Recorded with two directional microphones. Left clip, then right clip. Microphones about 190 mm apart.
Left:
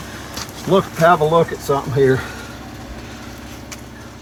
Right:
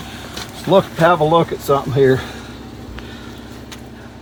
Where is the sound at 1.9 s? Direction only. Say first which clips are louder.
Right 1 dB; 30° right (ahead or behind).